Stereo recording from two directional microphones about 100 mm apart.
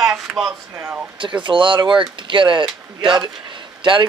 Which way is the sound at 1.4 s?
55° right (ahead or behind).